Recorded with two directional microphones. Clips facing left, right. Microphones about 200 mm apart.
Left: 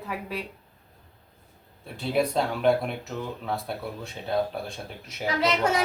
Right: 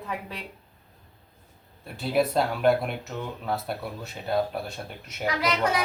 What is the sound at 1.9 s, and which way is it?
Speech, centre (ahead or behind).